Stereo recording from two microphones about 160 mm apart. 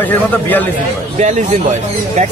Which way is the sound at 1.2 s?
45° right (ahead or behind).